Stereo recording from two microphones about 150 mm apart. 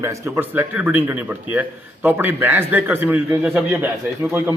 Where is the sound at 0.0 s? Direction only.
20° right (ahead or behind).